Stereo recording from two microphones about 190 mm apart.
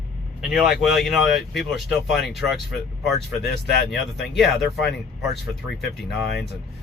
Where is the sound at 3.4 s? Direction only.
60° left (ahead or behind).